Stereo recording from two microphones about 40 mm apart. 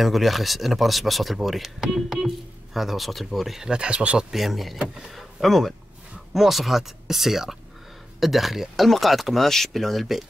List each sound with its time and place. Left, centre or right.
0.0 s speech: centre
3.7 s speech: right
4.3 s speech: centre